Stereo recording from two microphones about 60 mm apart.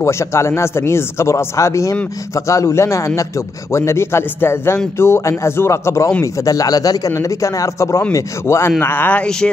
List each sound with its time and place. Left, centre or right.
0.0 s a man's voice: left
8.1 s a man's voice: left
8.8 s speech: left
9.2 s speech: centre